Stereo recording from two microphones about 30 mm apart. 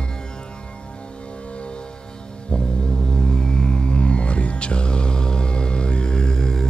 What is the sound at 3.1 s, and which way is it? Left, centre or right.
Music, left.